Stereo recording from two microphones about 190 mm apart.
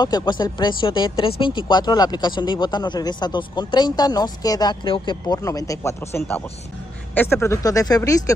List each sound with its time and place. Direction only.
0.0 s speech: 25° left (ahead or behind)